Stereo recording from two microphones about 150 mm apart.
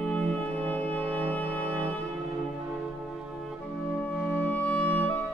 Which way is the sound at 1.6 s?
20° right (ahead or behind).